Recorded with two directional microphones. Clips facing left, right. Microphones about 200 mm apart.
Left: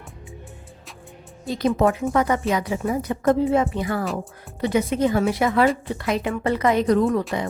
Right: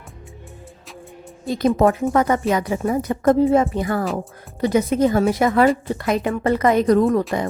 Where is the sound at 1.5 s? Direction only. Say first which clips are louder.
Right 3 dB; 50° right (ahead or behind).